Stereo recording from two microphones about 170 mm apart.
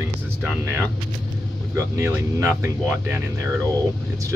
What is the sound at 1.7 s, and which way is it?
Speech, 15° right (ahead or behind).